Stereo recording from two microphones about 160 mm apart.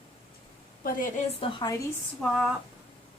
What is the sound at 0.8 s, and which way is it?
Speech, 60° left (ahead or behind).